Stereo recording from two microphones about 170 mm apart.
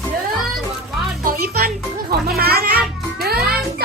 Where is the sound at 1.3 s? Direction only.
65° right (ahead or behind).